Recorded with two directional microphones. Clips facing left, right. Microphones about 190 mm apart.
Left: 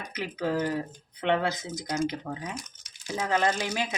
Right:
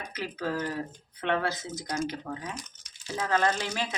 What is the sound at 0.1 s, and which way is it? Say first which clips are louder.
Speech: left 4 dB; 15° left (ahead or behind).